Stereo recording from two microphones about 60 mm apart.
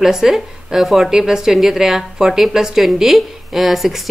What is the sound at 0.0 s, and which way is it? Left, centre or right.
A woman's voice, centre.